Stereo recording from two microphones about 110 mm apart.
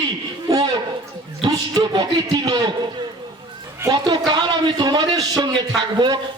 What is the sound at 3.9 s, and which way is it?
A man's voice, 40° right (ahead or behind).